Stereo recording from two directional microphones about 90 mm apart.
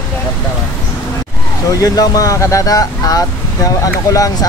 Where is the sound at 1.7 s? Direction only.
40° left (ahead or behind).